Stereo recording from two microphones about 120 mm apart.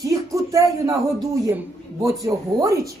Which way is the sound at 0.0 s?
30° right (ahead or behind).